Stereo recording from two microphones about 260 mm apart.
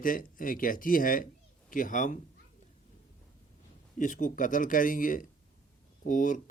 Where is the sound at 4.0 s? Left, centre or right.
Left.